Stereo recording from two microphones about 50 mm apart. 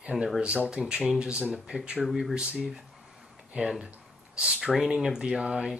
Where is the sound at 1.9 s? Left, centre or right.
Centre.